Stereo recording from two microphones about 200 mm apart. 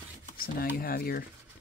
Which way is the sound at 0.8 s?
50° left (ahead or behind).